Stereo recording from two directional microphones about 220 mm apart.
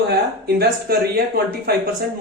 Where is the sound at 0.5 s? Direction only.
45° right (ahead or behind).